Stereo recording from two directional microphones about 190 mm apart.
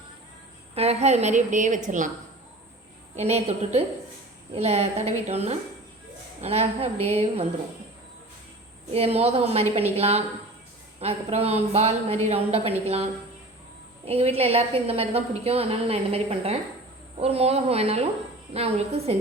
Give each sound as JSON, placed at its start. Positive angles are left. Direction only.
{"t": 0.8, "sound": "a woman's voice", "side_deg": -35}
{"t": 3.2, "sound": "a woman's voice", "side_deg": -35}
{"t": 8.9, "sound": "a woman's voice", "side_deg": -30}